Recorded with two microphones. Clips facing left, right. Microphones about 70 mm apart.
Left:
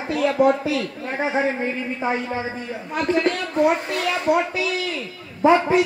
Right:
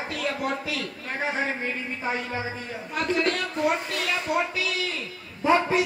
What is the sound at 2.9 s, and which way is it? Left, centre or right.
A man's voice, left.